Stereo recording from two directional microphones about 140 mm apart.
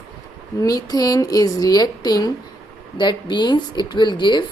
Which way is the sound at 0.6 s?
25° left (ahead or behind).